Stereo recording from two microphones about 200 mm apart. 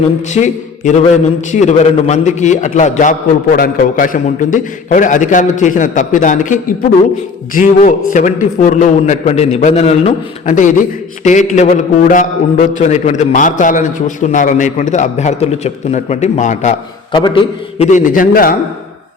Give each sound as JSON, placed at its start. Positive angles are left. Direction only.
{"t": 0.3, "sound": "a man's voice", "side_deg": 35}
{"t": 17.1, "sound": "a man's voice", "side_deg": 25}